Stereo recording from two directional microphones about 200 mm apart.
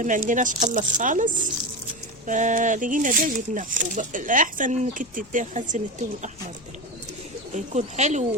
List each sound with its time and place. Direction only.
0.0 s speech: 40° right (ahead or behind)
7.5 s speech: 35° right (ahead or behind)